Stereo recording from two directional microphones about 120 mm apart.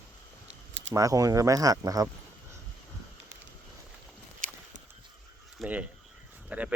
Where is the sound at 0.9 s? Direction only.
30° right (ahead or behind).